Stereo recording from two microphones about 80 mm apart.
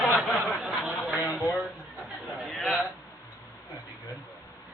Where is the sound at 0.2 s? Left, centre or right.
Centre.